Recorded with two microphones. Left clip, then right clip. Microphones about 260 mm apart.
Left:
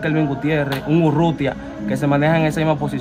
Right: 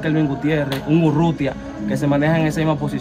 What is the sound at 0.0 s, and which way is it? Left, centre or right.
Speech, left.